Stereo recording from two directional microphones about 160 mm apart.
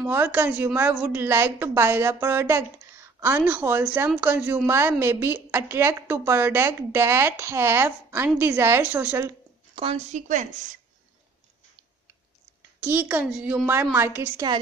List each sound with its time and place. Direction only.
0.0 s a woman's voice: 10° right (ahead or behind)
9.8 s a woman's voice: 40° right (ahead or behind)
12.8 s a woman's voice: 10° right (ahead or behind)